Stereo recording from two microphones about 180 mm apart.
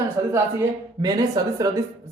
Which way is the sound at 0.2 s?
20° right (ahead or behind).